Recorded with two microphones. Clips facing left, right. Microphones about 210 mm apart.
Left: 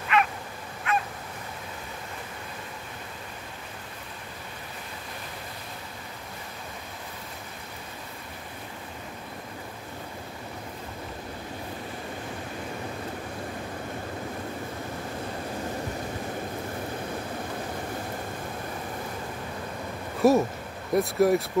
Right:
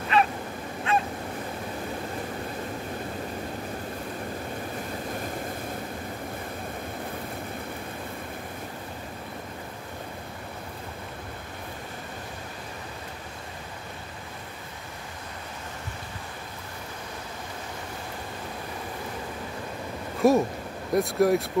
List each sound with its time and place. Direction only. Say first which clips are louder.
0.1 s dog: right 1 dB; 35° right (ahead or behind)
0.9 s goose: right 2 dB; 30° right (ahead or behind)
20.2 s a sound: even; centre (ahead or behind)
20.9 s speech: even; centre (ahead or behind)